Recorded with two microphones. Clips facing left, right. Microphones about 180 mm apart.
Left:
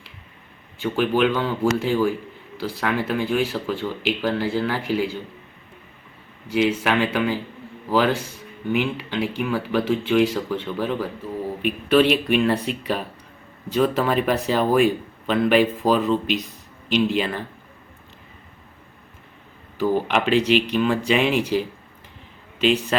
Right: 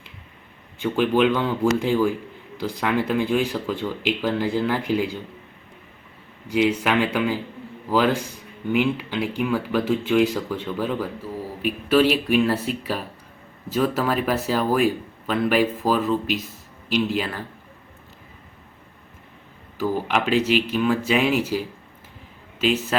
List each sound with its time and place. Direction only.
1.4 s speech: 15° right (ahead or behind)
6.5 s speech: 10° right (ahead or behind)
19.8 s speech: 5° right (ahead or behind)
22.6 s speech: 5° right (ahead or behind)